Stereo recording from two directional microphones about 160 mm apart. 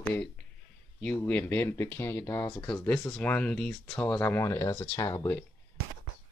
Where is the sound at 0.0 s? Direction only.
10° left (ahead or behind).